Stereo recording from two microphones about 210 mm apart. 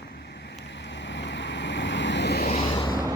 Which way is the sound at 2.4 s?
30° left (ahead or behind).